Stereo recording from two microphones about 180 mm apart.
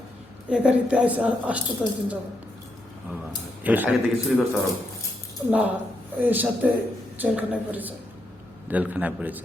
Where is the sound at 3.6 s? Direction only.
10° right (ahead or behind).